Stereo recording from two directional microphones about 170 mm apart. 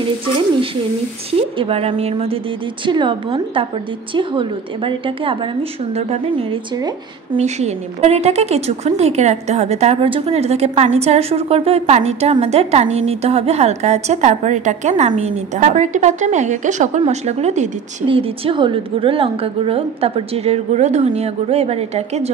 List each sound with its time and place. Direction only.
1.6 s a woman's voice: 35° right (ahead or behind)